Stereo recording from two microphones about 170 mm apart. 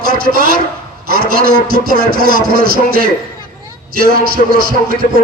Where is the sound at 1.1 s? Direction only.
60° right (ahead or behind).